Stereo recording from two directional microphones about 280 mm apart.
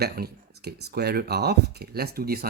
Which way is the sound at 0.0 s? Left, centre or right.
Right.